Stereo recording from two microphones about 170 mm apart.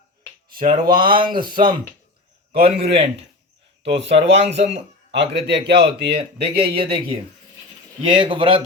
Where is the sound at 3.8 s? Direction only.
90° right.